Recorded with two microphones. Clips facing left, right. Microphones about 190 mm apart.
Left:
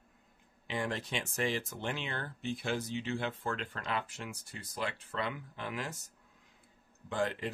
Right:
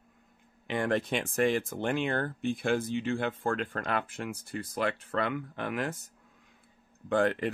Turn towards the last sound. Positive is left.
turn(degrees=-60)  # may be behind; listen again after turning